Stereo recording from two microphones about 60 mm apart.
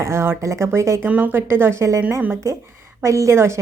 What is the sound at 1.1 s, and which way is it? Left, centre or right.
Speech, right.